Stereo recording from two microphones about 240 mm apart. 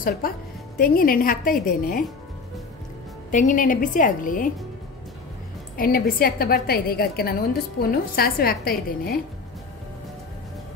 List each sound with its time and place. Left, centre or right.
0.2 s a woman's voice: left
3.3 s a woman's voice: left
5.8 s a woman's voice: left